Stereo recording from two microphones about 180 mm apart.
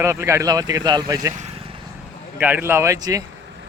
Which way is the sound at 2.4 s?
10° right (ahead or behind).